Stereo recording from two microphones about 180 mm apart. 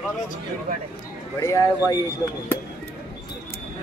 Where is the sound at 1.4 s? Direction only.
15° left (ahead or behind).